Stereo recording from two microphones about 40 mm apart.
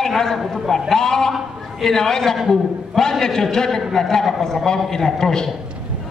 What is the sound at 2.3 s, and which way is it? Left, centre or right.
Speech, centre.